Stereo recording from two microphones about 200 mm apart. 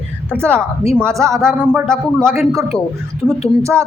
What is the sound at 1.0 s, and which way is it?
Speech, 15° right (ahead or behind).